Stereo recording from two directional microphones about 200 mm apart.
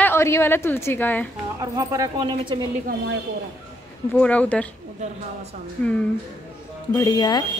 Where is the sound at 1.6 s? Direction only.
15° right (ahead or behind).